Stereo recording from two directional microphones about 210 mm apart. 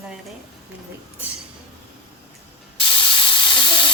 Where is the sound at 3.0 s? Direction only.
25° left (ahead or behind).